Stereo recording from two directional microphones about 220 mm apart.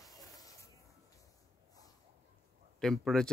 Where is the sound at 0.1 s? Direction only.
15° left (ahead or behind).